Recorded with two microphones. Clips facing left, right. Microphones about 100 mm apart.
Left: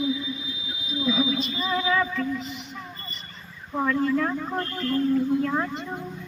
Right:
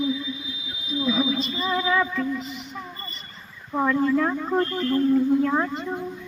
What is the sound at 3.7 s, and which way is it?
Music, 20° right (ahead or behind).